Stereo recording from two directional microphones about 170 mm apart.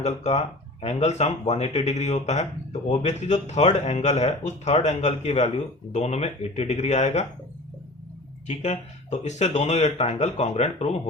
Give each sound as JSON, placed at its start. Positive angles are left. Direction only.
{"t": 0.0, "sound": "speech", "side_deg": 40}
{"t": 8.4, "sound": "speech", "side_deg": 45}